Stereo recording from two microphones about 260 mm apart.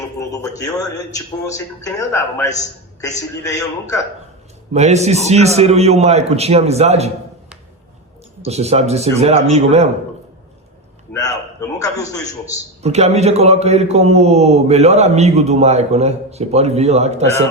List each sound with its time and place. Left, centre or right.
0.2 s a sound: centre
1.1 s a man's voice: centre
4.7 s a man's voice: right
8.4 s a man's voice: right
11.1 s a man's voice: centre
12.8 s a man's voice: right